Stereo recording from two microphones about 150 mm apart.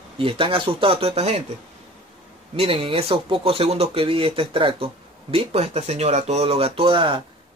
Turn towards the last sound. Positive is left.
turn(degrees=-35)  # may be behind; listen again after turning